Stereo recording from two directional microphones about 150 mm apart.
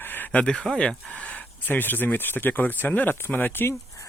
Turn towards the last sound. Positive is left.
turn(degrees=15)  # may be behind; listen again after turning